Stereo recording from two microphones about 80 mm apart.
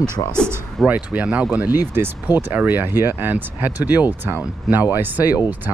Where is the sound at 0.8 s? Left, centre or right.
Centre.